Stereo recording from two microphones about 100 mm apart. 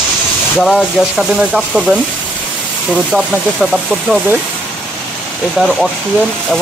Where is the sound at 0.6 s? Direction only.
Centre (ahead or behind).